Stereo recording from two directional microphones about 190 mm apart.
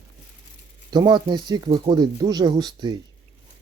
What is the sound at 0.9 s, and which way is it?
Speech, 25° right (ahead or behind).